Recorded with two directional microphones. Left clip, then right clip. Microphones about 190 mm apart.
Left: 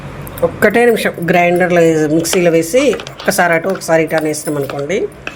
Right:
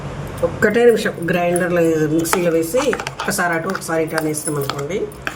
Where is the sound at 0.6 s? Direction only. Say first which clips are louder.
Left 3 dB; 40° left (ahead or behind).